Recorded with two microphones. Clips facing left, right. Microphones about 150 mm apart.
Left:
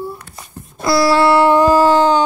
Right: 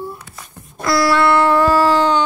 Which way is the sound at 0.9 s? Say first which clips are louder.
Left 2 dB; 30° left (ahead or behind).